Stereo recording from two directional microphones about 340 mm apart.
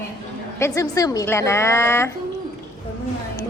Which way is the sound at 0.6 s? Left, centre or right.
Centre.